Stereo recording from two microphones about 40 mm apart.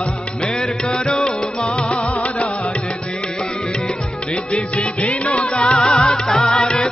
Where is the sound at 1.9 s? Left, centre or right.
Left.